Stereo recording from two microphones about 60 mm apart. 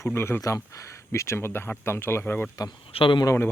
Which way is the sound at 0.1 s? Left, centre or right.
Left.